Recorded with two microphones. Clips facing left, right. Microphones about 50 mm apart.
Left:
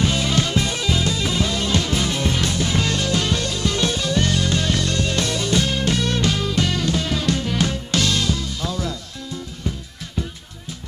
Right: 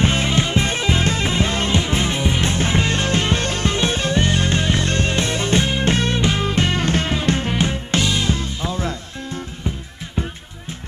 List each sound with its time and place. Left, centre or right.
0.0 s music: right
8.3 s music: right